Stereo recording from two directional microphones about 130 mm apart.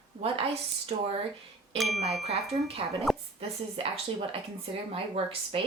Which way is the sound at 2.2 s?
55° right (ahead or behind).